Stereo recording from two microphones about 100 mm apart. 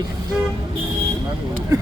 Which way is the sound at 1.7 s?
35° right (ahead or behind).